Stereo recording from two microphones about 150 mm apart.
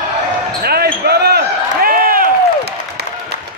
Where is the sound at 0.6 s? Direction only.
90° right; by 2.3 s 70° right (ahead or behind).